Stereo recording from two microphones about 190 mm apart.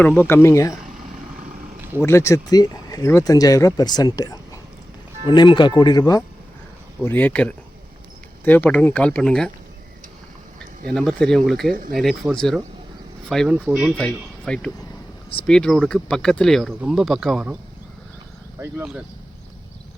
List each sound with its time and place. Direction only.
0.0 s speech: 10° left (ahead or behind)
2.0 s speech: 15° left (ahead or behind)
10.8 s speech: 5° left (ahead or behind)
11.7 s speech: 50° right (ahead or behind)
11.9 s speech: centre (ahead or behind)
18.6 s speech: 10° right (ahead or behind)